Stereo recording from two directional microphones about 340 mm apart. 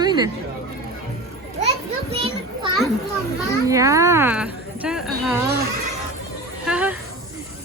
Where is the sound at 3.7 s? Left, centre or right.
Centre.